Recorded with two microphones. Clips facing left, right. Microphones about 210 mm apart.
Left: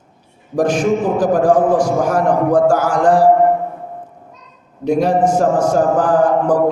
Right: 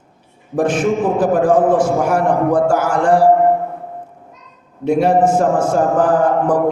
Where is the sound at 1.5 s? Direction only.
25° right (ahead or behind).